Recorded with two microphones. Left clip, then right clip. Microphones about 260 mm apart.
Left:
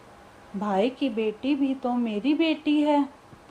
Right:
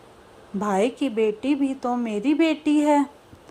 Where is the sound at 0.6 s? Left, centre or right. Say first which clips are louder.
Right 2 dB; centre.